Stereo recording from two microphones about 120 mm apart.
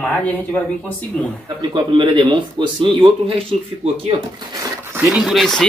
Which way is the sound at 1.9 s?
40° right (ahead or behind).